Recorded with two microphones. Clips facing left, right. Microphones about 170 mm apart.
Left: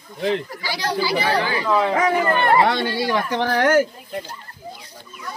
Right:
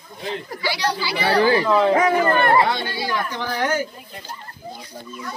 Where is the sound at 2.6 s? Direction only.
75° left (ahead or behind).